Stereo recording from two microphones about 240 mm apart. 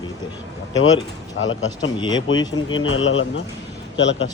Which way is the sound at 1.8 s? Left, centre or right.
Centre.